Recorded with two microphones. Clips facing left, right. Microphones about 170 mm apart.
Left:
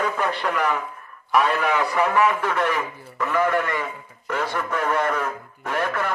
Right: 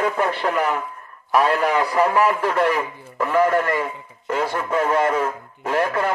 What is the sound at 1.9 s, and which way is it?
Speech, 35° right (ahead or behind).